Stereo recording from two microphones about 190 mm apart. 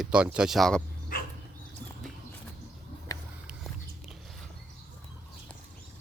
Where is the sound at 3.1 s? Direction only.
20° left (ahead or behind).